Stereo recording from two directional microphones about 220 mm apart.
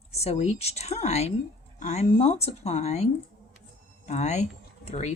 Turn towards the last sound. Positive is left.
turn(degrees=30)  # may be behind; listen again after turning